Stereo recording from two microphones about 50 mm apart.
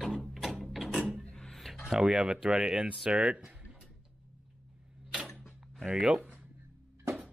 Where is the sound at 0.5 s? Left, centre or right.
Centre.